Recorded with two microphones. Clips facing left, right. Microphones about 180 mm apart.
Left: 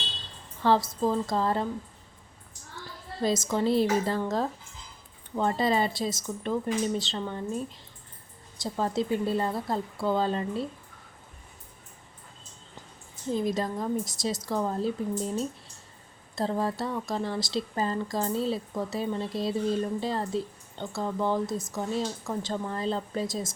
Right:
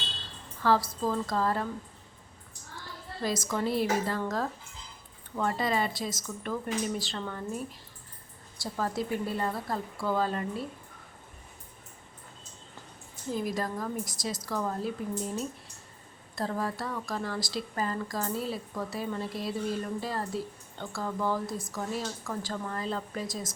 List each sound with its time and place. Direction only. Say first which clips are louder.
0.6 s speech: left 3 dB; 25° left (ahead or behind)
3.2 s speech: left 4 dB; 25° left (ahead or behind)
5.4 s speech: left 3 dB; 30° left (ahead or behind)
13.3 s speech: left 4 dB; 25° left (ahead or behind)
16.3 s speech: left 4 dB; 25° left (ahead or behind)